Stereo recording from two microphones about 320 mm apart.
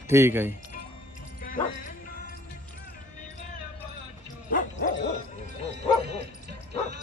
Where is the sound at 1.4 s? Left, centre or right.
Left.